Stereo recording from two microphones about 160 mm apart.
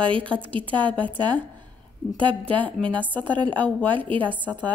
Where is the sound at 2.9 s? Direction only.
10° left (ahead or behind).